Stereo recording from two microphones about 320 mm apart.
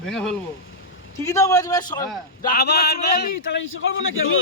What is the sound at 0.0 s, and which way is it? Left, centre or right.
Speech, centre.